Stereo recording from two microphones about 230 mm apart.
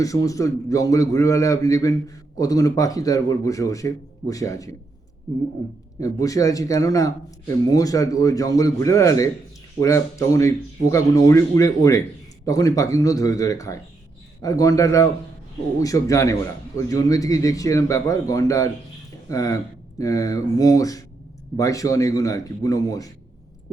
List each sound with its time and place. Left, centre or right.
0.0 s a man's voice: centre